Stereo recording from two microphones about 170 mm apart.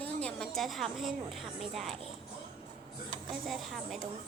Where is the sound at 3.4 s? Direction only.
Centre (ahead or behind).